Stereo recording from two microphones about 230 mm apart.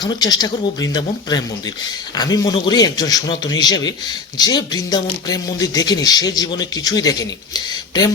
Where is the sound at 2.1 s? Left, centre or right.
Centre.